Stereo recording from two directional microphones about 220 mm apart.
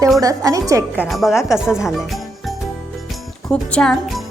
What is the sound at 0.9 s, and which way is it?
Speech, 5° left (ahead or behind).